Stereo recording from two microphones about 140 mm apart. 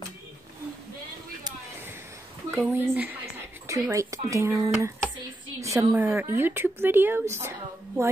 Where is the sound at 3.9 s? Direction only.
20° right (ahead or behind).